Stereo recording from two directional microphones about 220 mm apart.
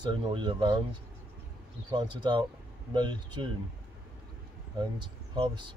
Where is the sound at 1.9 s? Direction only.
20° right (ahead or behind).